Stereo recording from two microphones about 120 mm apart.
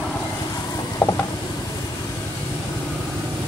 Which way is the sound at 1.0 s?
30° left (ahead or behind).